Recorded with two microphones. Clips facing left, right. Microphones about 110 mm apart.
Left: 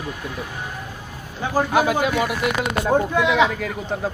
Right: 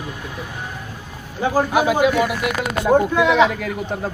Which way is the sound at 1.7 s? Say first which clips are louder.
Right 2 dB; 10° right (ahead or behind).